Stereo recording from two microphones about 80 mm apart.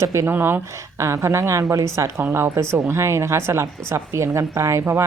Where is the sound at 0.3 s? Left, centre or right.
Right.